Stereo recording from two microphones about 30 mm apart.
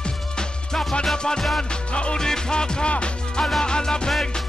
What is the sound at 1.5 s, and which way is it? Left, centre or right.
Music, left.